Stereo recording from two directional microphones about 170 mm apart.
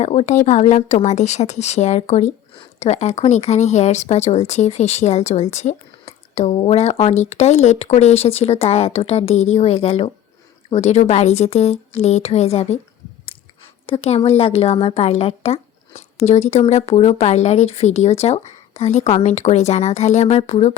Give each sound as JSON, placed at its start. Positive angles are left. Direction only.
{"t": 0.0, "sound": "speech", "side_deg": 40}
{"t": 13.8, "sound": "speech", "side_deg": 35}